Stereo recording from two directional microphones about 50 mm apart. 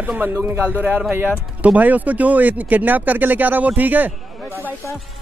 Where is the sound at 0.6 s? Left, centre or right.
Right.